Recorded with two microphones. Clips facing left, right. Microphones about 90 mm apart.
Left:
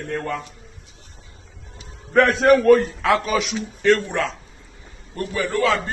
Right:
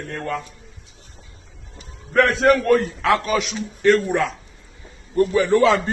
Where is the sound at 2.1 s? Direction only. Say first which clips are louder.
Left 1 dB; centre (ahead or behind).